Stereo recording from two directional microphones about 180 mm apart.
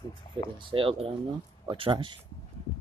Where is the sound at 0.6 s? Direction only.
30° right (ahead or behind).